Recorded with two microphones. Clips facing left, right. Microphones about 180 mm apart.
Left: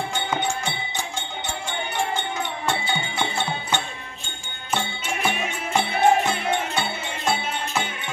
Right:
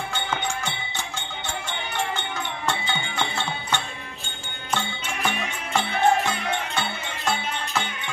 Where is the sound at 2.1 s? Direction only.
15° left (ahead or behind).